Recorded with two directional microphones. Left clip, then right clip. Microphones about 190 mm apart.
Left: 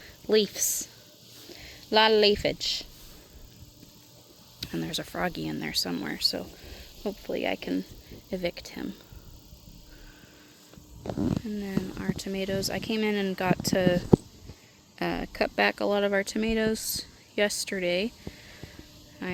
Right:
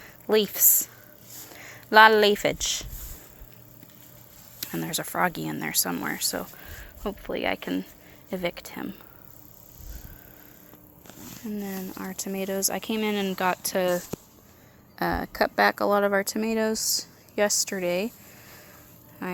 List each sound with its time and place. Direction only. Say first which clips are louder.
0.0 s a woman's voice: right 1 dB; 20° left (ahead or behind)
4.6 s speech: right 1 dB; 15° left (ahead or behind)
11.4 s speech: left 1 dB; 10° left (ahead or behind)
16.6 s speech: right 3 dB; 25° left (ahead or behind)
17.7 s speech: right 1 dB; 10° left (ahead or behind)